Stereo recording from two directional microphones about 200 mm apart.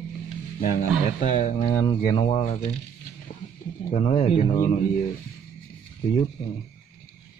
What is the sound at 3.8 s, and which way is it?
Speech, 35° left (ahead or behind).